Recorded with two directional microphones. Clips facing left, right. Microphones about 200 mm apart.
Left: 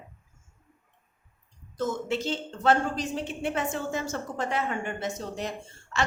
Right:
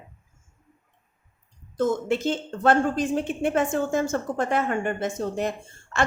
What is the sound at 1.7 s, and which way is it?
A woman's voice, 55° right (ahead or behind).